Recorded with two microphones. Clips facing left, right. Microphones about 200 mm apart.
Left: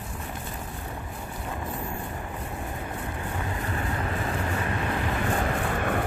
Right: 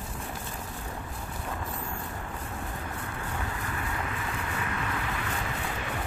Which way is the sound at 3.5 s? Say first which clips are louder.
Left 4 dB; 35° left (ahead or behind).